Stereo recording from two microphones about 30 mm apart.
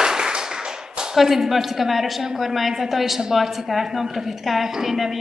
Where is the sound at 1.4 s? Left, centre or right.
Centre.